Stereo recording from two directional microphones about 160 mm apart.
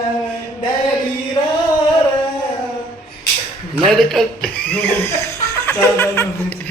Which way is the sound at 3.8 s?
Centre (ahead or behind).